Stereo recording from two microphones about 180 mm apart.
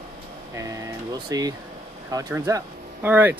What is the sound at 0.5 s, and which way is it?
Speech, 20° right (ahead or behind).